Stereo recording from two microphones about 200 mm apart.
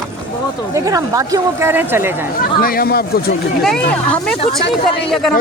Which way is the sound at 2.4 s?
45° left (ahead or behind).